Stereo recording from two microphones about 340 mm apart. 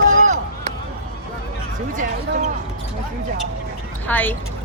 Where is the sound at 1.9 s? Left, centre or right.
Right.